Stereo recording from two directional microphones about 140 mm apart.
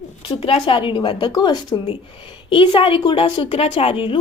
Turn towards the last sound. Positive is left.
turn(degrees=40)  # may be behind; listen again after turning